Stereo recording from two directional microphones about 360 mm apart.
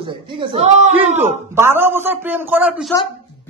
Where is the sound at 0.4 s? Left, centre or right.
Centre.